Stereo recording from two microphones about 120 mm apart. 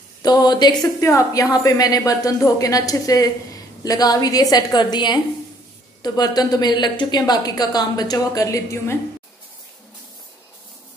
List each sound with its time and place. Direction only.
0.2 s a woman's voice: 35° left (ahead or behind)